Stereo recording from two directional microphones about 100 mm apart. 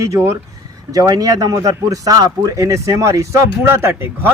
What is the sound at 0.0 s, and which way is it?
Speech, 30° right (ahead or behind).